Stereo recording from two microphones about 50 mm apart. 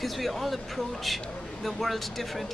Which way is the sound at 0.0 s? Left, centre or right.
Centre.